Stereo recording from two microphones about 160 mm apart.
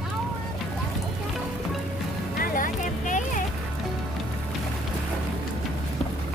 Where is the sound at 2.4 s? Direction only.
60° left (ahead or behind).